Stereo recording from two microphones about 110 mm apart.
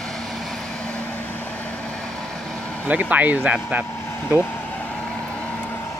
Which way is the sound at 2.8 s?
15° right (ahead or behind).